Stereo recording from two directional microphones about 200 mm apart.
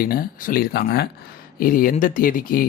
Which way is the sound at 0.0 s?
45° left (ahead or behind).